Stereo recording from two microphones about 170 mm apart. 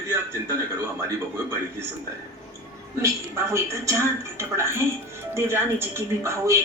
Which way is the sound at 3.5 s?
15° right (ahead or behind).